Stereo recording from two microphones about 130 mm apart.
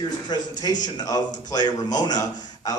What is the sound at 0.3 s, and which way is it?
A man's voice, 30° left (ahead or behind).